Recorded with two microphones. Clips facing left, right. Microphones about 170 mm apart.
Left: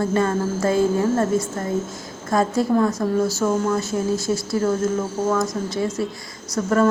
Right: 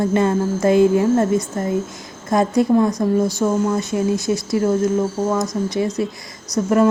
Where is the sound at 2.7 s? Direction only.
15° right (ahead or behind).